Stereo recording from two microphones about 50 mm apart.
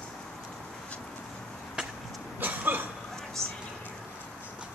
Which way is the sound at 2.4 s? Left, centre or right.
Right.